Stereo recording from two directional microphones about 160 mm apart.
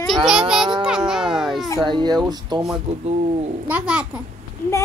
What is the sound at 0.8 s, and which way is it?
Music, 5° right (ahead or behind).